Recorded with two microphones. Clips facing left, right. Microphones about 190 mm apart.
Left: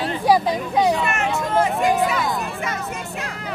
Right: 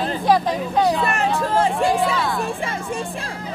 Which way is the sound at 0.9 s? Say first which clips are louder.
Right 1 dB; 35° right (ahead or behind).